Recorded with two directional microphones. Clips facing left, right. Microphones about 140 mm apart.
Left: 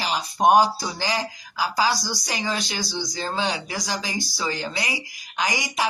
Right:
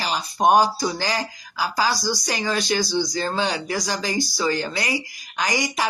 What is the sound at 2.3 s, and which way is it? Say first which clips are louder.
Speech: right 3 dB; 20° left (ahead or behind).